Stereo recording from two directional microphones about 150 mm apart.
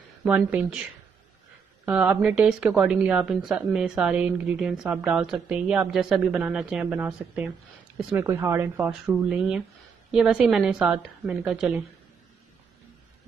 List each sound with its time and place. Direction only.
0.2 s speech: 10° right (ahead or behind)
1.9 s a woman's voice: 5° right (ahead or behind)